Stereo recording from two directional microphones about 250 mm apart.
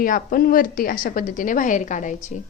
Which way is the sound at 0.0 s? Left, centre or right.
Left.